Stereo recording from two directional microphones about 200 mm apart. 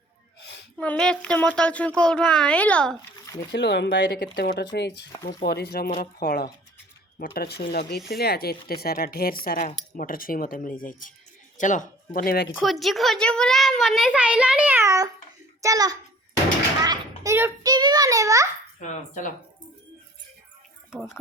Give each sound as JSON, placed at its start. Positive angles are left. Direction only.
{"t": 0.4, "sound": "a sound", "side_deg": 55}
{"t": 0.8, "sound": "a child's voice", "side_deg": 5}
{"t": 3.5, "sound": "a woman's voice", "side_deg": 60}
{"t": 12.5, "sound": "a child's voice", "side_deg": 0}
{"t": 18.8, "sound": "speech", "side_deg": 40}
{"t": 20.9, "sound": "a child's voice", "side_deg": 0}